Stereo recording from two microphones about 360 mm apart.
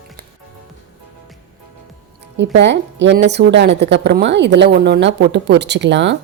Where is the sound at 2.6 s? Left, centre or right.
Right.